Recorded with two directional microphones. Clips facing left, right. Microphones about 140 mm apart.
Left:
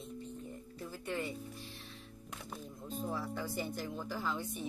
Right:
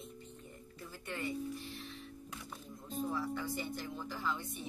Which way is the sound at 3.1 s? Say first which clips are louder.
Right 1 dB; 40° left (ahead or behind).